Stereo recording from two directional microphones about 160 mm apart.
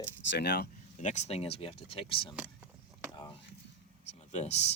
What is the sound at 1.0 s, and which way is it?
Speech, 45° left (ahead or behind).